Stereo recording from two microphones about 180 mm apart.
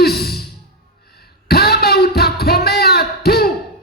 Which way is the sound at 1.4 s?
60° left (ahead or behind).